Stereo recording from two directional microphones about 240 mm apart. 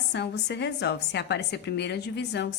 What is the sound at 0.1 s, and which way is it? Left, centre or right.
A woman's voice, left.